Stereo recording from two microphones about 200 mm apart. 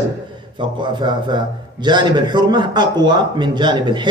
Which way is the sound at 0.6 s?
25° right (ahead or behind).